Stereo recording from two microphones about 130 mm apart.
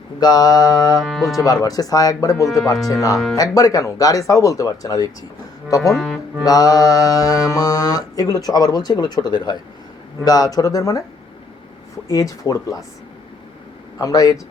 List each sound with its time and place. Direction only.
0.2 s mantra: 30° left (ahead or behind)
0.9 s speech: centre (ahead or behind)
1.4 s mantra: 30° left (ahead or behind)
5.9 s speech: 5° left (ahead or behind)
6.4 s mantra: 30° left (ahead or behind)
12.0 s mantra: 25° left (ahead or behind)
14.0 s mantra: 25° left (ahead or behind)